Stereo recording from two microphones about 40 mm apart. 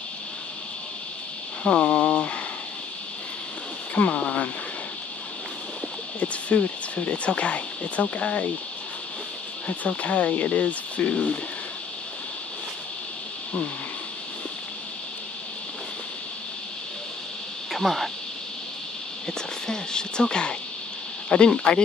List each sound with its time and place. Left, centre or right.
1.6 s speech: left
3.9 s speech: left
6.1 s speech: left
9.7 s speech: left
17.7 s speech: centre
19.2 s speech: centre